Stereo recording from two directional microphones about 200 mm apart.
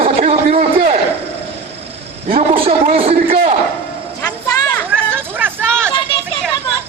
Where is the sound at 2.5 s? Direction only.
30° right (ahead or behind).